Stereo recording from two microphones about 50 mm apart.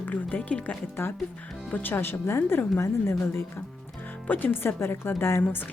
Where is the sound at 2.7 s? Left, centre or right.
Left.